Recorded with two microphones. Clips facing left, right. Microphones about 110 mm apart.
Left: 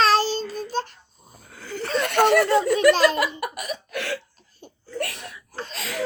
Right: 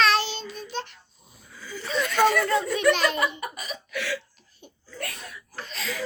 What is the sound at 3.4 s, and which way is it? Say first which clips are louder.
Cough: left 5 dB; 65° left (ahead or behind).